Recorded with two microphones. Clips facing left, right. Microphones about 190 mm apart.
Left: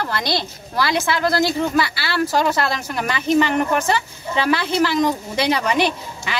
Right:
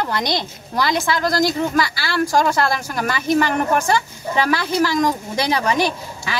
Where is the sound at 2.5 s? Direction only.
10° left (ahead or behind).